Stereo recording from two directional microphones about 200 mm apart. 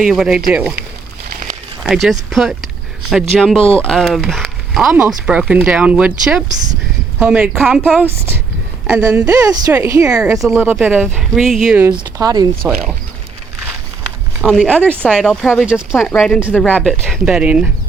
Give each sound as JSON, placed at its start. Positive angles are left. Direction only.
{"t": 0.0, "sound": "speech", "side_deg": -5}
{"t": 1.8, "sound": "a woman's voice", "side_deg": 0}
{"t": 10.1, "sound": "speech", "side_deg": -5}
{"t": 11.9, "sound": "speech", "side_deg": -20}
{"t": 14.4, "sound": "speech", "side_deg": 0}